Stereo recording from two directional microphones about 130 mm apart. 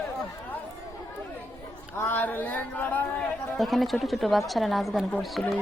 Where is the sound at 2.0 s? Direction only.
15° left (ahead or behind).